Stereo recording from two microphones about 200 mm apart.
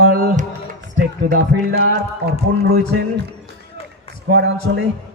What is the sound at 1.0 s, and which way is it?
Speech, 55° right (ahead or behind).